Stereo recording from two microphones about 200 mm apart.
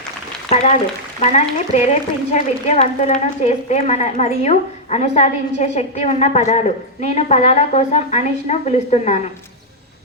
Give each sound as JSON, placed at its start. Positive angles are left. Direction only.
{"t": 1.3, "sound": "a woman's voice", "side_deg": 35}